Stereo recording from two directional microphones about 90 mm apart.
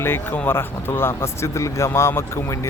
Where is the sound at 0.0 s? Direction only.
25° left (ahead or behind).